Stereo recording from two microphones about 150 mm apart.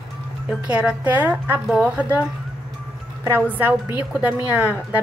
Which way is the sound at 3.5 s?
10° right (ahead or behind).